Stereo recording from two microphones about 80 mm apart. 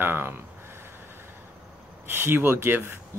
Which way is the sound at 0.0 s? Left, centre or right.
Right.